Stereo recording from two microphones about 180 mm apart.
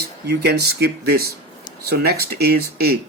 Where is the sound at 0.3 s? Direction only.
65° right (ahead or behind).